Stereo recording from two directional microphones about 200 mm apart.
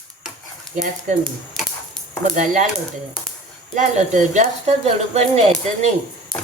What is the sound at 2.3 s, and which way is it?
Speech, 40° right (ahead or behind).